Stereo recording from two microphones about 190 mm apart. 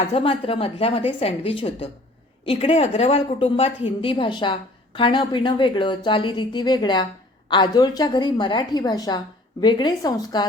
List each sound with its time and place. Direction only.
0.1 s a woman's voice: 30° left (ahead or behind)